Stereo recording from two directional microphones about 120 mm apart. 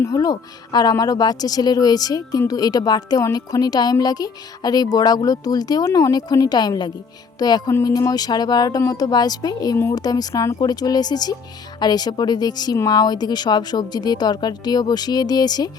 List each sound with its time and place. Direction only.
0.0 s speech: 30° left (ahead or behind)